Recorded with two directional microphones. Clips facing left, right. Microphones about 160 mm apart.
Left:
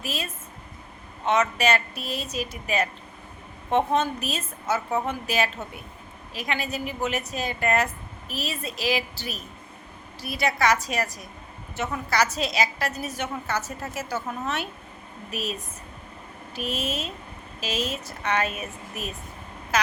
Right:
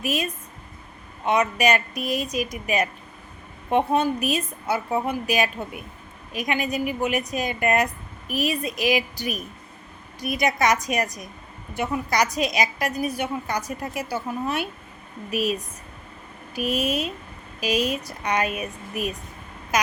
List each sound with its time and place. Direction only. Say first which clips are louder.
0.0 s a woman's voice: right 6 dB; 15° right (ahead or behind)